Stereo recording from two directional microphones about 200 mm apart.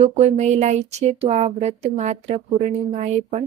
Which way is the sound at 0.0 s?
35° right (ahead or behind).